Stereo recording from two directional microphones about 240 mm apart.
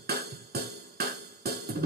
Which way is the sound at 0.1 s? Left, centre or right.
Right.